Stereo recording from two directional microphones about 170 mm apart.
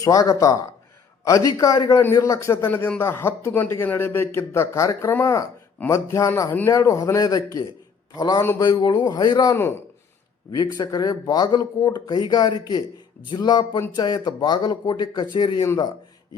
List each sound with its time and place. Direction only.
0.0 s a man's voice: 20° left (ahead or behind)